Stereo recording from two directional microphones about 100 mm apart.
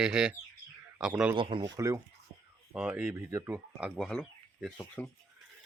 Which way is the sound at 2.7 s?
10° right (ahead or behind).